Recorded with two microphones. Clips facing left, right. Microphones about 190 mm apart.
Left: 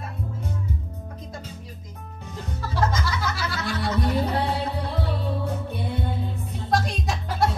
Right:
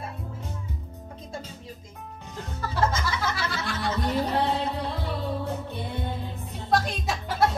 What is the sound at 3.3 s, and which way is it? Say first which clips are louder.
Music: left 2 dB; centre (ahead or behind).